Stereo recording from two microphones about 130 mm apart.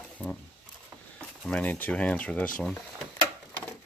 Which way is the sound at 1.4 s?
10° left (ahead or behind).